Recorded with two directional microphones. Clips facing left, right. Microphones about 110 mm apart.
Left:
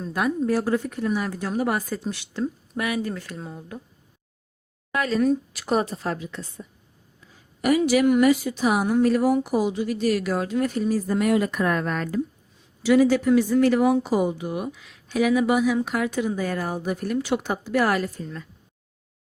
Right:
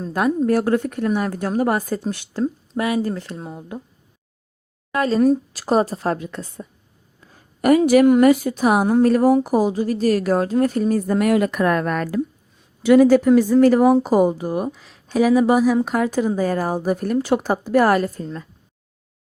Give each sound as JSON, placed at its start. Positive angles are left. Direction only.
{"t": 0.0, "sound": "speech", "side_deg": -40}
{"t": 0.5, "sound": "a woman's voice", "side_deg": -60}
{"t": 2.4, "sound": "speech", "side_deg": -30}
{"t": 4.9, "sound": "a woman's voice", "side_deg": -35}
{"t": 7.2, "sound": "a sound", "side_deg": -50}
{"t": 8.2, "sound": "a woman's voice", "side_deg": -45}